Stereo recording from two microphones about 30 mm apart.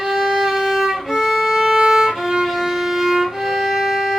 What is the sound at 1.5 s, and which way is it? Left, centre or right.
Violin, centre.